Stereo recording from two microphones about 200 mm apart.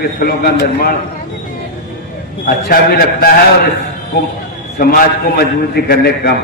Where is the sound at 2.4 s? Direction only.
50° left (ahead or behind).